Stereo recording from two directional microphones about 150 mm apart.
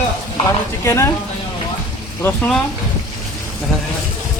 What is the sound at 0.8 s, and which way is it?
Speech, 20° left (ahead or behind).